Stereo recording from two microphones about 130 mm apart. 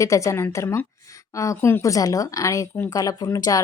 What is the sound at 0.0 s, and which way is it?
Speech, 25° left (ahead or behind).